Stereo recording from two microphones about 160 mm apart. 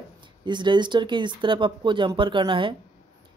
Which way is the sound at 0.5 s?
30° right (ahead or behind).